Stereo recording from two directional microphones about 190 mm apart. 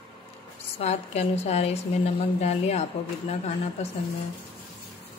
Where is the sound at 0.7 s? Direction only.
35° left (ahead or behind).